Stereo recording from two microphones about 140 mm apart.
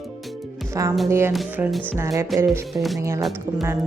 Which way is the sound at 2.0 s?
25° right (ahead or behind).